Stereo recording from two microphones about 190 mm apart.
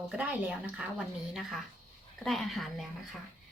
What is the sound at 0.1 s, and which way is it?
A woman's voice, 5° right (ahead or behind).